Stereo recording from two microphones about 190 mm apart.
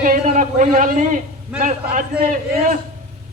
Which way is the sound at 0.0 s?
45° right (ahead or behind).